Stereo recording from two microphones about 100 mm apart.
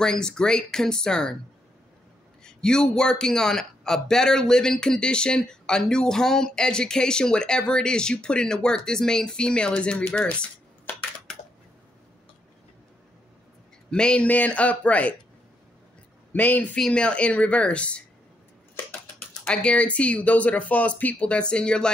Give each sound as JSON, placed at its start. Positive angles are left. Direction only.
{"t": 0.0, "sound": "a man's voice", "side_deg": 5}
{"t": 2.4, "sound": "a man's voice", "side_deg": 5}
{"t": 13.8, "sound": "a man's voice", "side_deg": 10}
{"t": 16.3, "sound": "a man's voice", "side_deg": 15}
{"t": 19.4, "sound": "a man's voice", "side_deg": 10}